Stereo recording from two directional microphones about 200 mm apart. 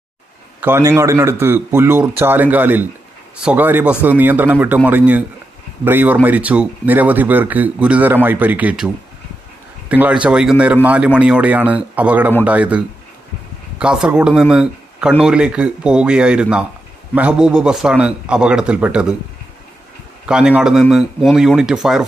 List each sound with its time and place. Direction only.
0.6 s a man's voice: 10° right (ahead or behind)
20.2 s speech: 5° right (ahead or behind)